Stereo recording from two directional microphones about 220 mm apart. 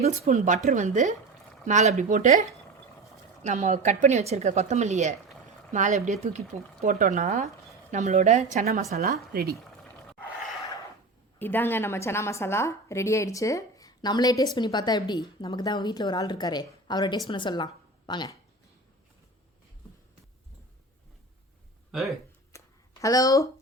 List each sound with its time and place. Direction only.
0.0 s a woman's voice: 35° right (ahead or behind)
3.4 s a woman's voice: 35° right (ahead or behind)
11.3 s a woman's voice: 10° left (ahead or behind)
22.5 s a sound: 15° left (ahead or behind)